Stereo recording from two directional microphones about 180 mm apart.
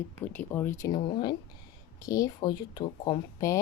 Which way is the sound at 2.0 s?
20° left (ahead or behind).